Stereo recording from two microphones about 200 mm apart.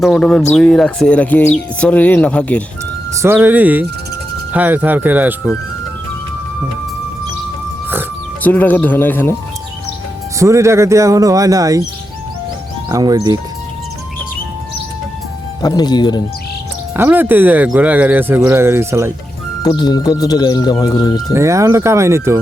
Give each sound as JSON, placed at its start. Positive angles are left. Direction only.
{"t": 0.0, "sound": "speech", "side_deg": 5}
{"t": 3.2, "sound": "speech", "side_deg": -10}
{"t": 8.4, "sound": "speech", "side_deg": 10}
{"t": 10.3, "sound": "speech", "side_deg": -15}
{"t": 12.9, "sound": "speech", "side_deg": -15}
{"t": 15.6, "sound": "speech", "side_deg": 20}
{"t": 16.9, "sound": "speech", "side_deg": -10}
{"t": 19.6, "sound": "speech", "side_deg": 20}
{"t": 21.3, "sound": "speech", "side_deg": -15}